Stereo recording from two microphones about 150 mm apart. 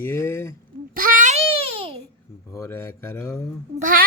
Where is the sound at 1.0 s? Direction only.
65° right (ahead or behind).